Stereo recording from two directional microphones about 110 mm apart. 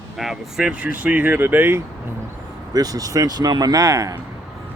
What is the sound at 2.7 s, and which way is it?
A man's voice, 35° right (ahead or behind).